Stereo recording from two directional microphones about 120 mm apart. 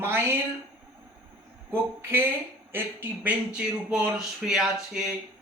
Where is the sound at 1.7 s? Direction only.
20° right (ahead or behind); by 4.7 s 5° right (ahead or behind).